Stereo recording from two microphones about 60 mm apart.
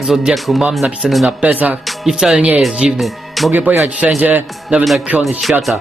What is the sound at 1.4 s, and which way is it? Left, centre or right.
Speech, right.